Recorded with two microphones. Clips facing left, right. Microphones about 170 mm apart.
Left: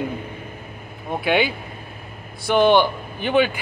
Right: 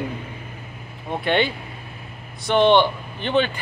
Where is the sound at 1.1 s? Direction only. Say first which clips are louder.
Left 1 dB; 5° left (ahead or behind).